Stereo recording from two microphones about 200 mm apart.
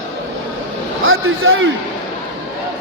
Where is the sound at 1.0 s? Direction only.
85° right.